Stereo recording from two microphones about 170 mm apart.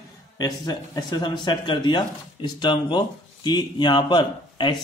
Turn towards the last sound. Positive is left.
turn(degrees=30)  # may be behind; listen again after turning